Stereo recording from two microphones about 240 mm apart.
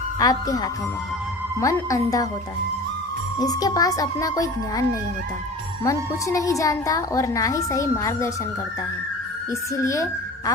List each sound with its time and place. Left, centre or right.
0.2 s a woman's voice: centre
3.4 s a woman's voice: centre
9.5 s a woman's voice: centre